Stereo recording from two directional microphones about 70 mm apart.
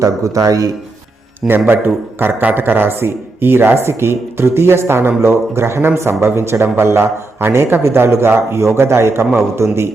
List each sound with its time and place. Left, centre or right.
0.0 s a man's voice: right
1.5 s a man's voice: right